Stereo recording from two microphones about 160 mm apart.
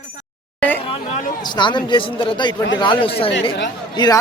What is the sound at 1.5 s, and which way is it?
Speech, 30° left (ahead or behind).